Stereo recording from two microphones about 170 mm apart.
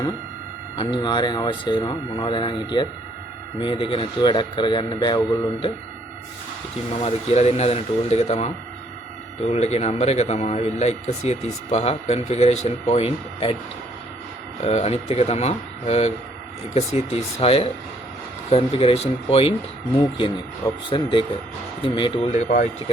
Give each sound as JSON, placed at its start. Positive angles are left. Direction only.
{"t": 0.8, "sound": "speech", "side_deg": 30}
{"t": 7.0, "sound": "speech", "side_deg": 40}
{"t": 14.6, "sound": "speech", "side_deg": 40}
{"t": 22.4, "sound": "speech", "side_deg": 55}